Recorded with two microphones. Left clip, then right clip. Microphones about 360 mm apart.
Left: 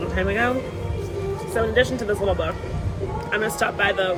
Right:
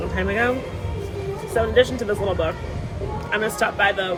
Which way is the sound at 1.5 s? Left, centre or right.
Centre.